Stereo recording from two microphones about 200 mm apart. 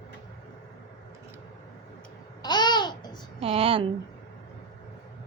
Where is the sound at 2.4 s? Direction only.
20° left (ahead or behind).